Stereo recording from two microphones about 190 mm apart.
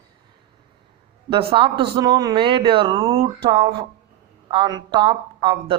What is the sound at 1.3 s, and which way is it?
Speech, 30° right (ahead or behind).